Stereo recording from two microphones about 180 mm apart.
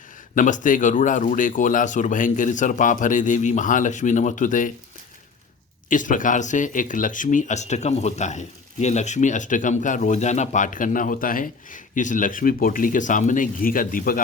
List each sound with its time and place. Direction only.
0.3 s speech: 45° left (ahead or behind)
5.9 s speech: 45° left (ahead or behind)